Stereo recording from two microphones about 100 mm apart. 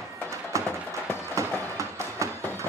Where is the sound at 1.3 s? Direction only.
30° right (ahead or behind).